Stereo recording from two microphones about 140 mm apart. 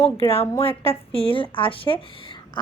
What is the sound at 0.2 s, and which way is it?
Speech, 40° left (ahead or behind).